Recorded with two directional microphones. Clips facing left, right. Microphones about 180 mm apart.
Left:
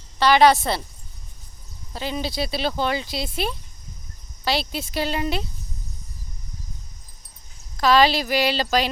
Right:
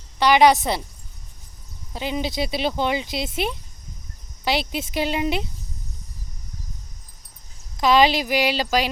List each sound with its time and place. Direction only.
0.2 s speech: 15° right (ahead or behind)
1.9 s speech: 15° right (ahead or behind)
7.8 s speech: 20° right (ahead or behind)